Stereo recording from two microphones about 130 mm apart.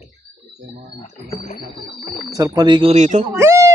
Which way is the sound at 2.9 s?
65° right (ahead or behind).